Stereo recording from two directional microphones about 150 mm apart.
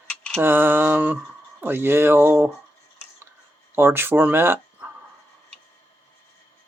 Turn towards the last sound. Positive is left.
turn(degrees=-15)  # may be behind; listen again after turning